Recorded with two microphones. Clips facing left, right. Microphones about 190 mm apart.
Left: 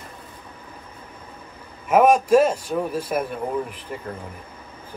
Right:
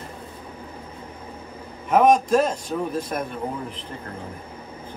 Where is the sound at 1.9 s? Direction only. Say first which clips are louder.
Left 1 dB; 10° left (ahead or behind).